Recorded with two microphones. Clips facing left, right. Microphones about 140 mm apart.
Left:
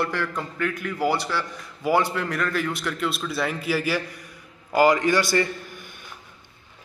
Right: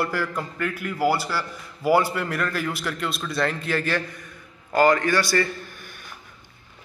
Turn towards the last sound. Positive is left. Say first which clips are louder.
# left 1 dB
turn(degrees=20)  # may be behind; listen again after turning